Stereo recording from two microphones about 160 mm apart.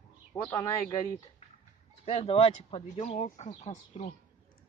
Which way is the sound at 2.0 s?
40° left (ahead or behind).